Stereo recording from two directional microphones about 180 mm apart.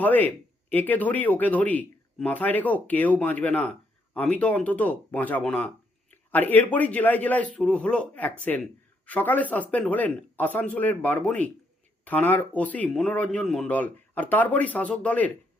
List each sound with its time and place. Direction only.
0.0 s speech: 10° left (ahead or behind)